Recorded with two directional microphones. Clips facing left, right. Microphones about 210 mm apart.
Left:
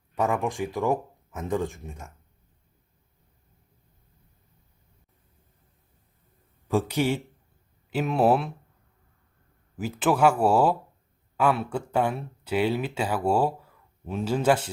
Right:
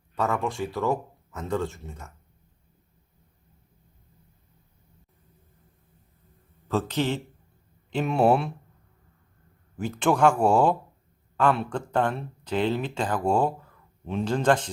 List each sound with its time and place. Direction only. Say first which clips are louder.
0.2 s speech: left 1 dB; 15° left (ahead or behind)
6.7 s speech: left 2 dB; 10° left (ahead or behind)
9.7 s speech: even; 5° left (ahead or behind)